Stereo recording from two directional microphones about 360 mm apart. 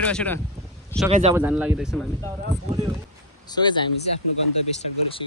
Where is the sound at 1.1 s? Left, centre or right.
Centre.